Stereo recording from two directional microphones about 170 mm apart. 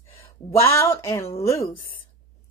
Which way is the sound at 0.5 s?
15° left (ahead or behind).